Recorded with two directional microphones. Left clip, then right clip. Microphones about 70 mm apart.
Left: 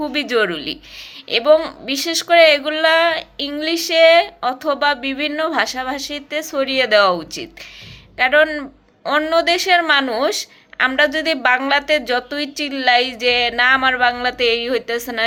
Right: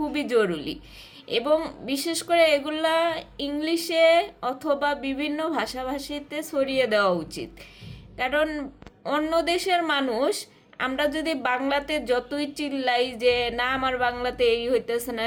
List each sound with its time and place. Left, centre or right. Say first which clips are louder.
0.1 s a woman's voice: left 5 dB; right